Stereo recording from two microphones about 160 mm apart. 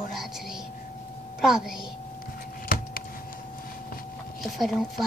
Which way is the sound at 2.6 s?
65° left (ahead or behind).